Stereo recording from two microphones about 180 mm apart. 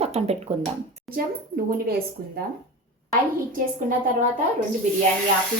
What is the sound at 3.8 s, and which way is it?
Speech, 50° right (ahead or behind).